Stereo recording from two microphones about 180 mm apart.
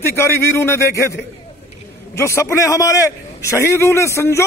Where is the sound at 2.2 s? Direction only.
15° left (ahead or behind).